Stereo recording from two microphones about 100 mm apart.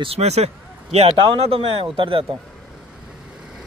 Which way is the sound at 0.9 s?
80° right.